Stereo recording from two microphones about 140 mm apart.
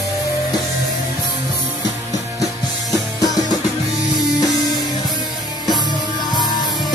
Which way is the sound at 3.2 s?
25° left (ahead or behind).